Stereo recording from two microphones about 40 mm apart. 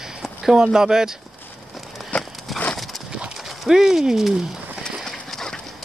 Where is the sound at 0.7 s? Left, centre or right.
Centre.